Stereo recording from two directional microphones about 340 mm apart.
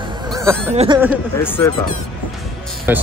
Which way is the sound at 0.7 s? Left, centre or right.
Centre.